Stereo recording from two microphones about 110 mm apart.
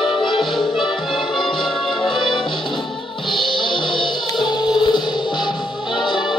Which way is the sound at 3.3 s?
50° left (ahead or behind).